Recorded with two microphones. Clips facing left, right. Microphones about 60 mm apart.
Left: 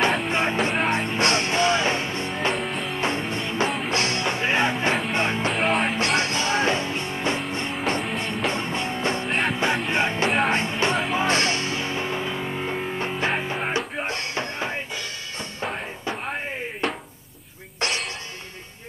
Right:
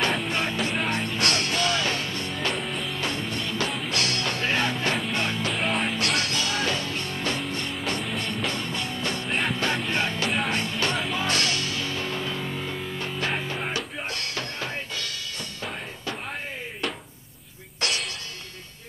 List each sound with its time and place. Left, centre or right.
0.3 s music: left
2.5 s music: centre
2.9 s music: left
5.5 s music: centre
5.9 s music: left
9.3 s music: centre
9.8 s music: left
17.7 s music: left